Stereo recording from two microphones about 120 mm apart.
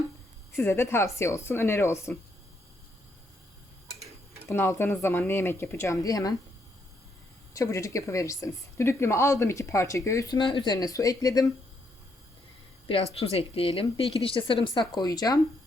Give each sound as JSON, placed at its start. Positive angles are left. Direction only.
{"t": 0.5, "sound": "a woman's voice", "side_deg": 20}
{"t": 4.4, "sound": "a woman's voice", "side_deg": 20}
{"t": 7.5, "sound": "a woman's voice", "side_deg": 25}
{"t": 10.3, "sound": "speech", "side_deg": 40}
{"t": 13.1, "sound": "a woman's voice", "side_deg": 60}